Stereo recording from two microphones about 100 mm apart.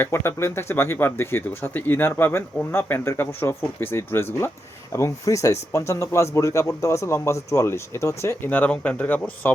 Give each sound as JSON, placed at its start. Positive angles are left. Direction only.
{"t": 0.0, "sound": "speech", "side_deg": 25}
{"t": 8.4, "sound": "speech", "side_deg": 15}